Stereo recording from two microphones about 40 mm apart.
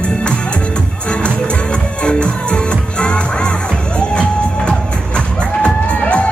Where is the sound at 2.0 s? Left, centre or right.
Left.